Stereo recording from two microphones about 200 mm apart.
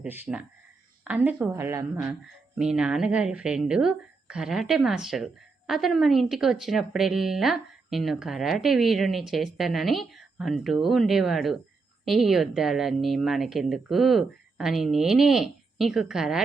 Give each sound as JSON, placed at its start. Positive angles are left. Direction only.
{"t": 0.0, "sound": "a woman's voice", "side_deg": -5}
{"t": 2.6, "sound": "speech", "side_deg": -5}